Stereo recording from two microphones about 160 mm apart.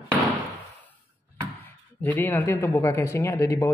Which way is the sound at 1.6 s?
10° left (ahead or behind).